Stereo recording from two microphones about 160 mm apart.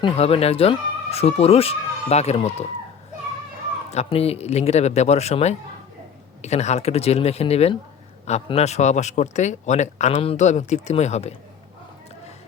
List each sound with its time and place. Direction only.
0.0 s speech: 40° left (ahead or behind)
3.9 s a man's voice: 40° left (ahead or behind)